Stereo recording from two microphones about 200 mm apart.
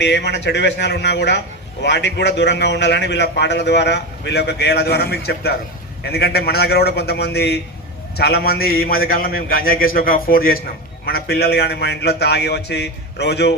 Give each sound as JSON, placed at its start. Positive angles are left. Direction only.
{"t": 0.0, "sound": "a man's voice", "side_deg": 60}